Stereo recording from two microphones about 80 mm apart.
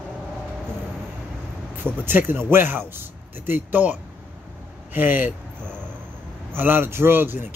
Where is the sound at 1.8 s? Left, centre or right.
Right.